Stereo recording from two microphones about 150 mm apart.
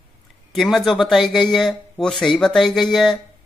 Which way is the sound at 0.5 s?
Centre (ahead or behind).